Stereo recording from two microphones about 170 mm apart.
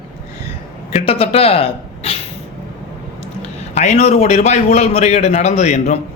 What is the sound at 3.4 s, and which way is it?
A man's voice, 40° left (ahead or behind).